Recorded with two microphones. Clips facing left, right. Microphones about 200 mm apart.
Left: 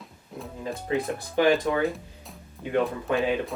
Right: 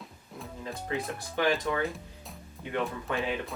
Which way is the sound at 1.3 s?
30° left (ahead or behind).